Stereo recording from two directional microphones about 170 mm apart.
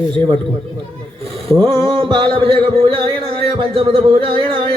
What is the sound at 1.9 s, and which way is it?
Music, 30° right (ahead or behind).